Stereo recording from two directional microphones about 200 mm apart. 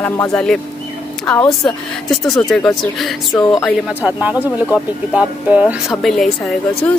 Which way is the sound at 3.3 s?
20° left (ahead or behind).